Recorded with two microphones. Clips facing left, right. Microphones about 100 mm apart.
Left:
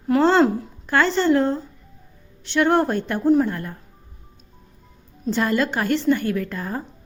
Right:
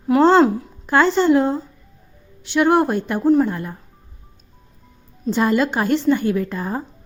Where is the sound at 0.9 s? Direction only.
15° right (ahead or behind).